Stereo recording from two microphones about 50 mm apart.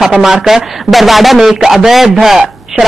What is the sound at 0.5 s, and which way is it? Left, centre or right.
Speech, centre.